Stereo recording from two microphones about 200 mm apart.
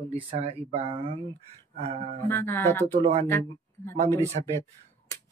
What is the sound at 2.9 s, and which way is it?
Speech, 30° right (ahead or behind).